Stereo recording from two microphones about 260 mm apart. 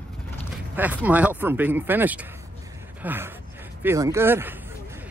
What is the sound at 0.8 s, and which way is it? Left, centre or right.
Speech, centre.